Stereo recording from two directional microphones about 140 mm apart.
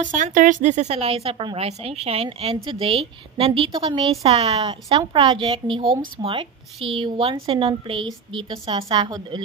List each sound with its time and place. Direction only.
0.0 s a woman's voice: 70° right (ahead or behind); by 9.4 s 30° right (ahead or behind)